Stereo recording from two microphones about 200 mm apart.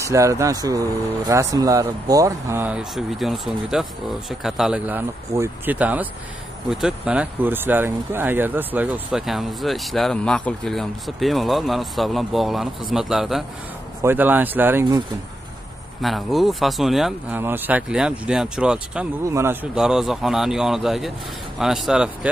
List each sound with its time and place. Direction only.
0.0 s speech: 15° right (ahead or behind)
16.0 s speech: centre (ahead or behind)